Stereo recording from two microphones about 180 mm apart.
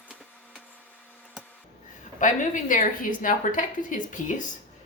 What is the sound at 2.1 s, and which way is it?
Speech, 45° left (ahead or behind).